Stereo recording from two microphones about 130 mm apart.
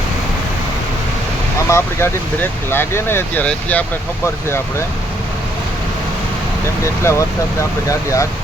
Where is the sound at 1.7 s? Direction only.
20° left (ahead or behind).